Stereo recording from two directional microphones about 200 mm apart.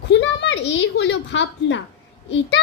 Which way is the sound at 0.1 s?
60° left (ahead or behind).